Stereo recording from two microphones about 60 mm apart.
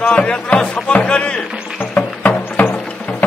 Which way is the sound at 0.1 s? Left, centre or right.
Centre.